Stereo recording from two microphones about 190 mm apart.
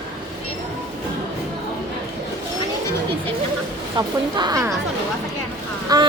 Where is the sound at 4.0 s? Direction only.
20° right (ahead or behind).